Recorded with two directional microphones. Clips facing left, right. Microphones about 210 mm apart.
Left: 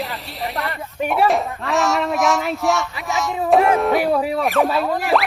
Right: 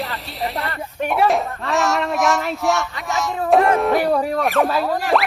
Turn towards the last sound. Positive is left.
turn(degrees=0)  # may be behind; listen again after turning